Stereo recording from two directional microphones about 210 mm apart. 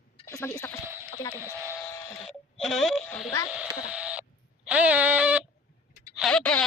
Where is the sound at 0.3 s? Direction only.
15° left (ahead or behind).